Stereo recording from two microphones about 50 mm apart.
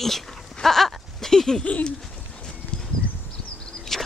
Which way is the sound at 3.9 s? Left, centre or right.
Centre.